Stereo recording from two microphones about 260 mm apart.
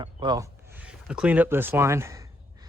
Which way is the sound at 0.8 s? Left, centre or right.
Centre.